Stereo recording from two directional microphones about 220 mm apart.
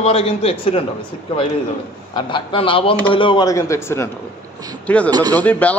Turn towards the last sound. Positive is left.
turn(degrees=5)  # may be behind; listen again after turning